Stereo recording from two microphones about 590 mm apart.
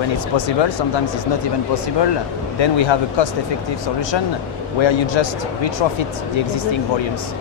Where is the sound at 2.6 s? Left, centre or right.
Left.